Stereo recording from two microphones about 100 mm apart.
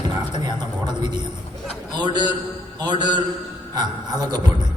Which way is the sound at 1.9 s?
45° right (ahead or behind).